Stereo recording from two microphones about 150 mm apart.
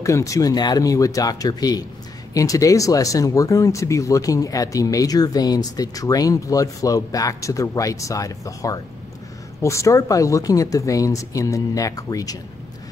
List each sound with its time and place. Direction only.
0.0 s speech: 20° left (ahead or behind)